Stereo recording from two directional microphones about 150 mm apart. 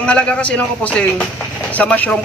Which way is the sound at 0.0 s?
10° left (ahead or behind).